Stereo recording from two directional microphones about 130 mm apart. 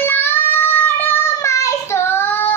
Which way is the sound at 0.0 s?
15° left (ahead or behind).